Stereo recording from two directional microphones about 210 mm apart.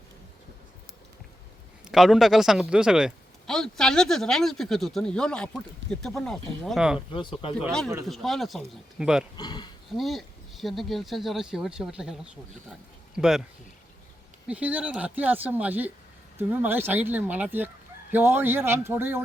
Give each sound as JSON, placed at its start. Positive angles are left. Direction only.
{"t": 1.9, "sound": "a man's voice", "side_deg": 0}
{"t": 7.1, "sound": "speech", "side_deg": 25}
{"t": 7.6, "sound": "a man's voice", "side_deg": 5}
{"t": 9.4, "sound": "speech", "side_deg": 20}
{"t": 10.0, "sound": "a man's voice", "side_deg": 0}
{"t": 14.4, "sound": "speech", "side_deg": -5}